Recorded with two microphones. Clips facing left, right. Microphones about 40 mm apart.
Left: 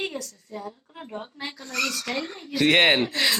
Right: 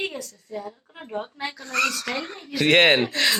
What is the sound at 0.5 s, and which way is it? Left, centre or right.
Speech, centre.